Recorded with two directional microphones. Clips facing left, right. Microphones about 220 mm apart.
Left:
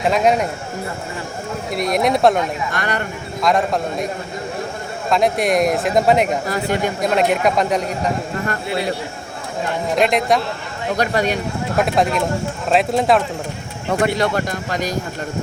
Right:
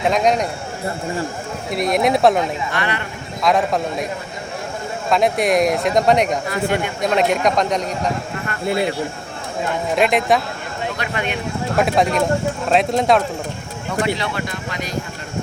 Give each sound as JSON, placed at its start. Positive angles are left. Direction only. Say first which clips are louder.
{"t": 0.1, "sound": "speech", "louder": "left 2 dB", "side_deg": 5}
{"t": 1.7, "sound": "speech", "louder": "right 1 dB", "side_deg": 0}
{"t": 2.7, "sound": "speech", "louder": "left 1 dB", "side_deg": 45}
{"t": 3.4, "sound": "speech", "louder": "even", "side_deg": 0}
{"t": 5.0, "sound": "speech", "louder": "even", "side_deg": 0}
{"t": 6.5, "sound": "speech", "louder": "left 1 dB", "side_deg": 40}
{"t": 7.0, "sound": "speech", "louder": "even", "side_deg": 0}
{"t": 9.9, "sound": "speech", "louder": "even", "side_deg": 0}
{"t": 10.9, "sound": "speech", "louder": "left 10 dB", "side_deg": 40}
{"t": 11.8, "sound": "speech", "louder": "right 1 dB", "side_deg": 0}
{"t": 14.0, "sound": "speech", "louder": "left 3 dB", "side_deg": 45}